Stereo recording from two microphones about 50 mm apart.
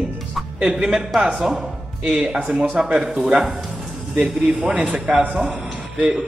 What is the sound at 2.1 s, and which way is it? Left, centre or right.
A man's voice, right.